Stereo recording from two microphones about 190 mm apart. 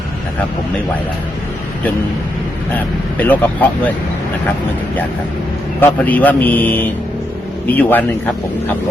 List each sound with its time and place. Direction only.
2.7 s speech: 10° left (ahead or behind)
5.8 s speech: 10° left (ahead or behind)